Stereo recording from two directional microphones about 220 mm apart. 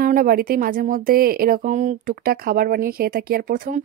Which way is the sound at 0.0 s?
40° right (ahead or behind).